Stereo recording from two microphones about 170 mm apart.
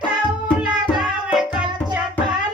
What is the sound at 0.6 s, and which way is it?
Music, 5° right (ahead or behind).